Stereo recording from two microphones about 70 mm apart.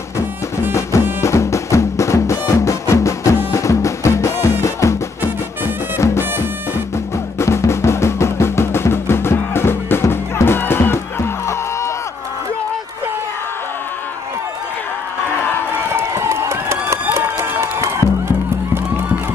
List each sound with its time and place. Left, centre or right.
1.2 s music: left
7.3 s music: left
15.9 s a sound: right
17.1 s music: right